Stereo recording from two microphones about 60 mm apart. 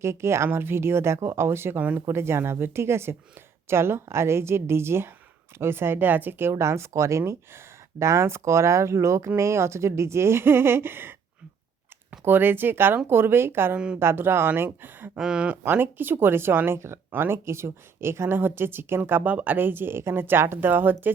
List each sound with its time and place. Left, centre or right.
0.0 s speech: right
6.5 s speech: right
12.2 s speech: right
13.7 s speech: centre
14.0 s speech: right
15.2 s speech: centre
15.6 s speech: right